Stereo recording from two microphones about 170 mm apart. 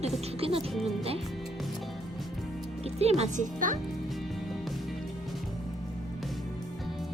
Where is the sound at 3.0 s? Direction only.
40° right (ahead or behind).